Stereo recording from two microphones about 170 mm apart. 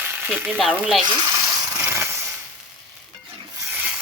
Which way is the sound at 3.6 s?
10° right (ahead or behind).